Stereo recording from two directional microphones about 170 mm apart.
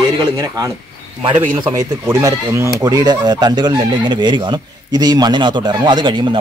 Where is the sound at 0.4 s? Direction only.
20° right (ahead or behind).